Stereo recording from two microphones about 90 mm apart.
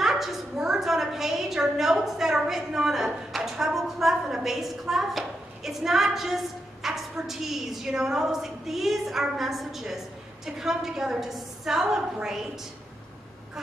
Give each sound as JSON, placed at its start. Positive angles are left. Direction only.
{"t": 0.0, "sound": "a woman's voice", "side_deg": -5}